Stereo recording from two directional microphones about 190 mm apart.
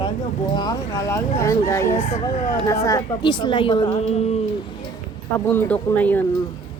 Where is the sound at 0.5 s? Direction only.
20° left (ahead or behind).